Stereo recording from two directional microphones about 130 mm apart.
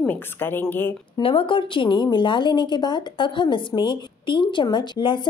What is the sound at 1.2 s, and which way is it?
A woman's voice, 40° left (ahead or behind).